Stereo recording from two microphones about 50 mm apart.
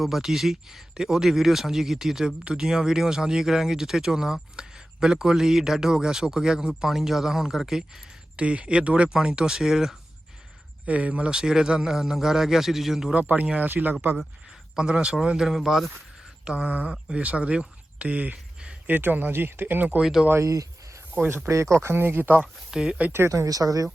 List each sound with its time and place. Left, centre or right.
0.0 s speech: centre
8.4 s speech: right; by 10.0 s centre
10.8 s speech: right; by 13.1 s centre
13.1 s speech: right
14.8 s speech: centre
15.4 s speech: centre
16.4 s speech: right
16.9 s speech: centre; by 20.0 s right
20.0 s speech: centre
20.4 s a sound: right
21.2 s speech: right
22.7 s speech: centre
23.1 s speech: right